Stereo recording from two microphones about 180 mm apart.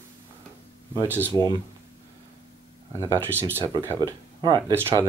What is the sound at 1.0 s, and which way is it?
Speech, 10° right (ahead or behind).